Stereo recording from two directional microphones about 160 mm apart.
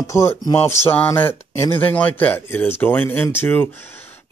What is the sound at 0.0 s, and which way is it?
Speech, 20° left (ahead or behind).